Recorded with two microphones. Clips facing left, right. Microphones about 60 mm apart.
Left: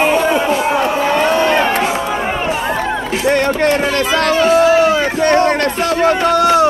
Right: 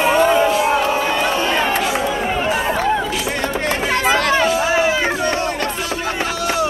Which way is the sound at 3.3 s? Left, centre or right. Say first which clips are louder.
Left 12 dB; left.